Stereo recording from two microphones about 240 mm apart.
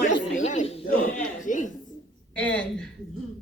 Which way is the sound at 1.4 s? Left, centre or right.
Left.